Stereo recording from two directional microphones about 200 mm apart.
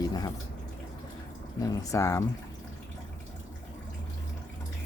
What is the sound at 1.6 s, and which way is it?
Speech, 15° left (ahead or behind).